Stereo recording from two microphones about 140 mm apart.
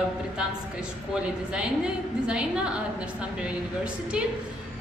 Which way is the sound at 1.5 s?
5° right (ahead or behind).